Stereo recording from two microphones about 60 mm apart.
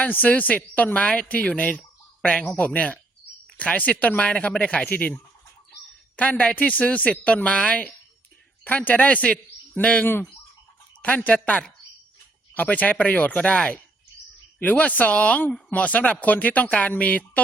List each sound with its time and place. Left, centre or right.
0.0 s speech: left
8.6 s speech: left
12.5 s speech: left